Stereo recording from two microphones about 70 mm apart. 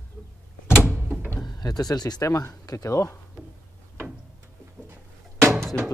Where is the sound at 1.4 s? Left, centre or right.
Left.